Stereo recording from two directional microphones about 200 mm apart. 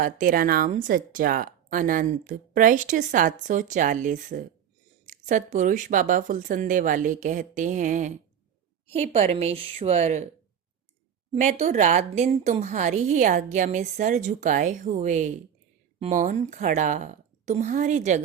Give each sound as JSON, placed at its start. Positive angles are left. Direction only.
{"t": 0.0, "sound": "speech", "side_deg": -45}
{"t": 11.3, "sound": "speech", "side_deg": -35}